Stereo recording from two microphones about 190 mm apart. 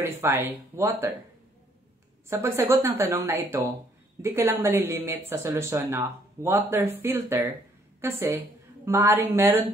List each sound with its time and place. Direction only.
0.0 s speech: 15° right (ahead or behind)
2.2 s a woman's voice: 15° right (ahead or behind)